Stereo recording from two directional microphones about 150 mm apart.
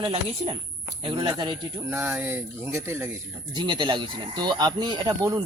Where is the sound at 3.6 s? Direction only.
30° right (ahead or behind).